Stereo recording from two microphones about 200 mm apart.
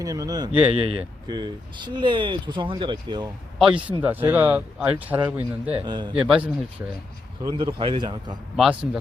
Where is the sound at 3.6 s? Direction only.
5° right (ahead or behind).